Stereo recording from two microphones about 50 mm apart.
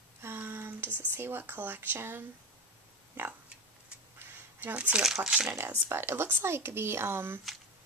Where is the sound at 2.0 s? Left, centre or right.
Right.